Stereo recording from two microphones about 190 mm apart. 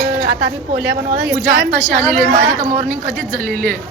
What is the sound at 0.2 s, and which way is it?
A woman's voice, 60° right (ahead or behind).